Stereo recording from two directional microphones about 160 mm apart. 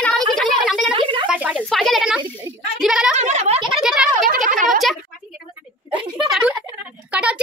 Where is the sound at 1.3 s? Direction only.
10° right (ahead or behind).